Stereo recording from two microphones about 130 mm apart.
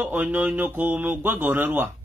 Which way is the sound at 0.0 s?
15° right (ahead or behind).